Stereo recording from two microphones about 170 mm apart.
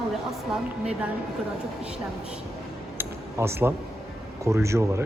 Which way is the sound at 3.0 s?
15° right (ahead or behind).